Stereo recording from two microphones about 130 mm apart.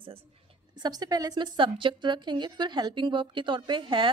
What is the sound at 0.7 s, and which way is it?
A woman's voice, 30° right (ahead or behind).